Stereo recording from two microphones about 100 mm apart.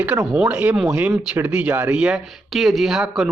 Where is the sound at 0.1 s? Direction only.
35° right (ahead or behind).